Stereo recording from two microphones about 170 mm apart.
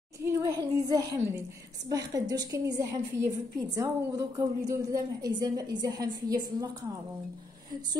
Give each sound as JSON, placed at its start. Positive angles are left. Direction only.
{"t": 0.2, "sound": "a woman's voice", "side_deg": -20}